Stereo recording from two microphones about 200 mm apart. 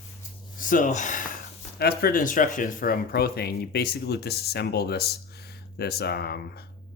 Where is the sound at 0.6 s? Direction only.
40° left (ahead or behind).